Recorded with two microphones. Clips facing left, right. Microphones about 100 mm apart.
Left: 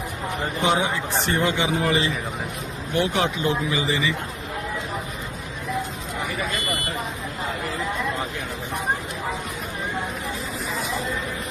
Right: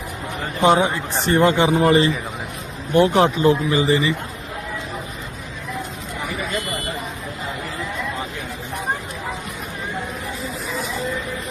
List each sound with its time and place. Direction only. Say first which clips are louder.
0.6 s speech: right 7 dB; 45° right (ahead or behind)